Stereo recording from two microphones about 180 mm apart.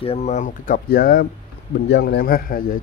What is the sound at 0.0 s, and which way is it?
Speech, 35° left (ahead or behind).